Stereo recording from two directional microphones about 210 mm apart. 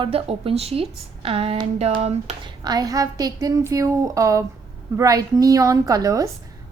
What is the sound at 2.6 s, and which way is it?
A woman's voice, 20° right (ahead or behind).